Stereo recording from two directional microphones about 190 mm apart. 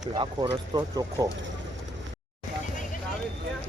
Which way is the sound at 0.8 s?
20° right (ahead or behind).